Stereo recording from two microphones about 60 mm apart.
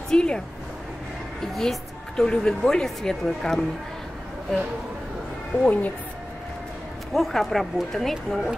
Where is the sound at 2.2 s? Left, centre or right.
Centre.